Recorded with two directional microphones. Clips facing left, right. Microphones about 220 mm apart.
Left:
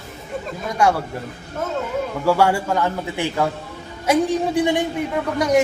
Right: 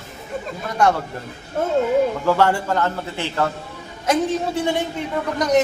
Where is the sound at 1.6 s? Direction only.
30° right (ahead or behind).